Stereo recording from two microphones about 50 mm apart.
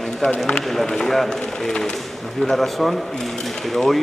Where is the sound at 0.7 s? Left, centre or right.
Centre.